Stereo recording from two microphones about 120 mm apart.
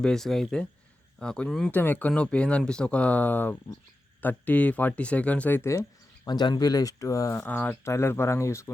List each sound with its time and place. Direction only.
0.0 s speech: 5° left (ahead or behind)
1.7 s speech: 15° left (ahead or behind)
6.2 s speech: 35° left (ahead or behind)
7.4 s speech: 15° left (ahead or behind)